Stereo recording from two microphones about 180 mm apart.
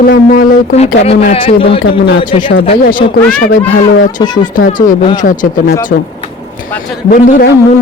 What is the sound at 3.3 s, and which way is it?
Speech, 50° left (ahead or behind).